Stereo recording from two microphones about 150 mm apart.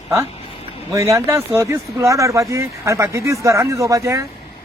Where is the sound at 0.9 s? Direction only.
20° right (ahead or behind).